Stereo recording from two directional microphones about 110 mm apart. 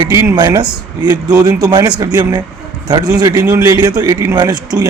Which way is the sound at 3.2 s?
35° right (ahead or behind).